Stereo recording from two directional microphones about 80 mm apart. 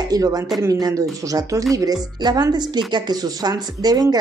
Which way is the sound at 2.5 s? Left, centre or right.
Right.